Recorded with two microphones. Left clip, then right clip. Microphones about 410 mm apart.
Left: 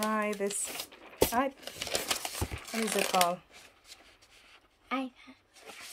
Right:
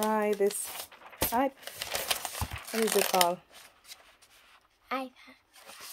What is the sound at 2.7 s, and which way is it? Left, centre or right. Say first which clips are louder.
Speech: right 2 dB; centre.